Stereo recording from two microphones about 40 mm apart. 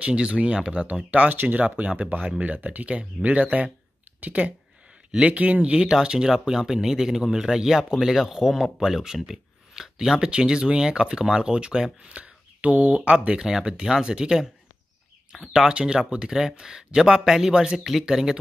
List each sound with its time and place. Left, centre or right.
0.0 s speech: right
1.3 s speech: right
2.0 s speech: right
2.4 s speech: right
3.0 s speech: right
6.0 s speech: centre
10.1 s speech: right
12.2 s a sound: right
12.8 s speech: right
13.4 s speech: centre
15.3 s speech: centre